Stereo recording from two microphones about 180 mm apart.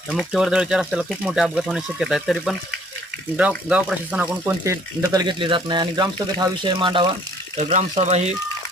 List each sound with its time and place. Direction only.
0.1 s speech: centre (ahead or behind)
3.7 s speech: 5° right (ahead or behind); by 7.1 s 25° right (ahead or behind)
7.6 s speech: 40° right (ahead or behind)